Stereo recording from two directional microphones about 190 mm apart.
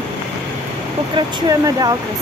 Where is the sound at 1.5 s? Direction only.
20° right (ahead or behind).